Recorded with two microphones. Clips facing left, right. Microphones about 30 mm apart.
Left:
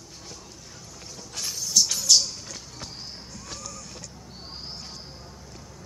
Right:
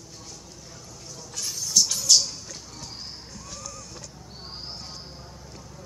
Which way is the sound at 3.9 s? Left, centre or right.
Centre.